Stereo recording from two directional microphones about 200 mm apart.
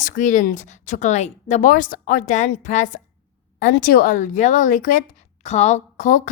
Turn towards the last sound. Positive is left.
turn(degrees=40)  # may be behind; listen again after turning